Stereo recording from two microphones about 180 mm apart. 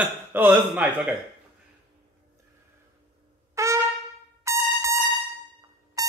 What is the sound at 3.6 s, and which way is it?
Trumpet, 15° right (ahead or behind).